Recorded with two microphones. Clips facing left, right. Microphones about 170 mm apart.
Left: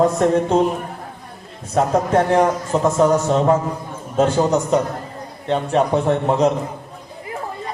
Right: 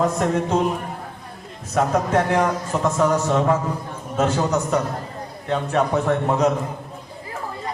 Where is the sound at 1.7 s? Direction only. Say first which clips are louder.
Left 3 dB; 30° left (ahead or behind).